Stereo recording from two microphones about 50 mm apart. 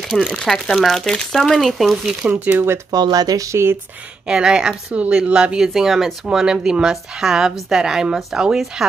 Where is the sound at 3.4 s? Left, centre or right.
Right.